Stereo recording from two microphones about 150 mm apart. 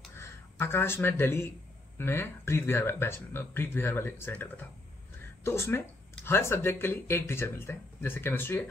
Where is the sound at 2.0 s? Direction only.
15° left (ahead or behind).